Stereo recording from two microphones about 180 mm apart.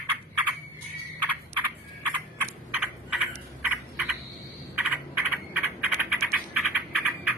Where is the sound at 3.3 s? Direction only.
10° right (ahead or behind).